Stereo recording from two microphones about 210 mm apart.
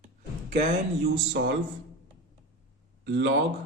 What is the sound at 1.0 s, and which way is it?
Speech, 50° right (ahead or behind).